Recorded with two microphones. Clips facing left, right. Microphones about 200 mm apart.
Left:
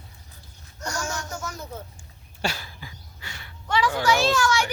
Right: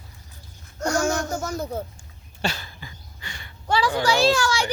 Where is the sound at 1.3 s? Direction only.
35° right (ahead or behind).